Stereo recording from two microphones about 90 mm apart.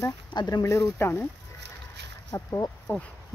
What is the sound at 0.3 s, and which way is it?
Speech, 55° left (ahead or behind).